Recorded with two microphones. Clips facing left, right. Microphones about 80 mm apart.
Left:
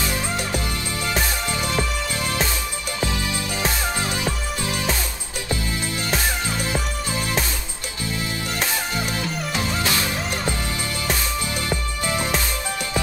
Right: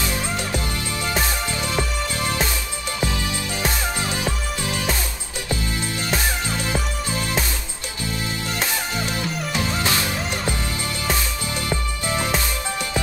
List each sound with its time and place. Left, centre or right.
3.1 s music: left
4.1 s music: right
9.8 s music: right